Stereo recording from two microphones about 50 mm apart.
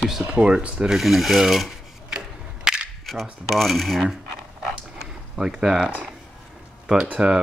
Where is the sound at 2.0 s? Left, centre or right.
Centre.